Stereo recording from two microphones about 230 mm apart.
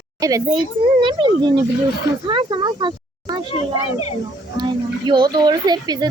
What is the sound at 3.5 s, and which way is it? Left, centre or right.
Speech, left.